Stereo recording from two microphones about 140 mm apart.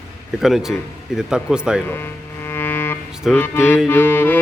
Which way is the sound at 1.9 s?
15° left (ahead or behind).